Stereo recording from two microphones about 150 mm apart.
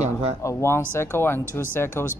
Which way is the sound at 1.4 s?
15° right (ahead or behind).